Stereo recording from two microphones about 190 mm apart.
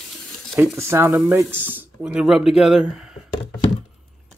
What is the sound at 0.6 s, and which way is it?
Speech, 15° right (ahead or behind).